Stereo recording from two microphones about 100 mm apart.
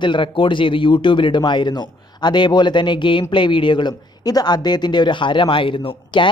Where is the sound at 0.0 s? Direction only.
55° left (ahead or behind).